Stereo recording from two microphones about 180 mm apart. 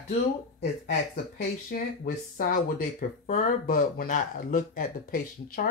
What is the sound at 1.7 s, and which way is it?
Speech, 50° left (ahead or behind).